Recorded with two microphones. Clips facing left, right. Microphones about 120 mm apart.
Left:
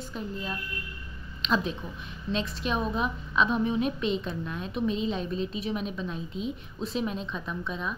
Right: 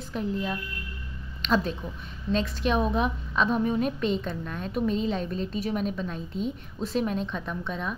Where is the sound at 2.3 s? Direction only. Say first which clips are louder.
Right 4 dB; 50° right (ahead or behind).